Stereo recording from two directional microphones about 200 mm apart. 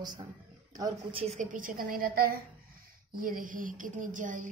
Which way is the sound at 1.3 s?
40° right (ahead or behind).